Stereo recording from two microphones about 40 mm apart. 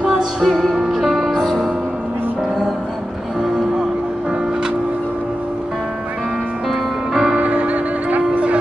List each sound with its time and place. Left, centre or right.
0.4 s music: centre
6.7 s music: centre
7.3 s music: right